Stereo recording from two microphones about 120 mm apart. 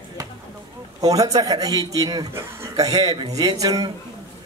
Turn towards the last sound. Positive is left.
turn(degrees=-30)  # may be behind; listen again after turning